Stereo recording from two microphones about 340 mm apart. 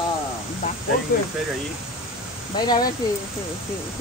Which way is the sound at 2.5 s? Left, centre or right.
Centre.